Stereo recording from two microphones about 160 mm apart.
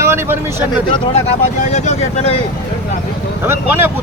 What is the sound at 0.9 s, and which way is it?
Speech, 45° left (ahead or behind).